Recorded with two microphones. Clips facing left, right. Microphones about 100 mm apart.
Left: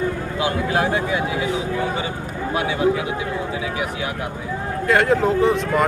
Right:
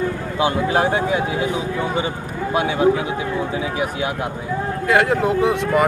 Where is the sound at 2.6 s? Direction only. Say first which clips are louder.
Right 3 dB; 30° right (ahead or behind).